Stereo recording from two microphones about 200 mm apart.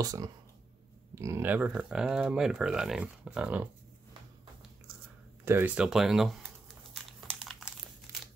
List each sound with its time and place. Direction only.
0.0 s speech: 15° right (ahead or behind)
5.4 s crumpling: 10° right (ahead or behind)
8.1 s crumpling: 15° right (ahead or behind)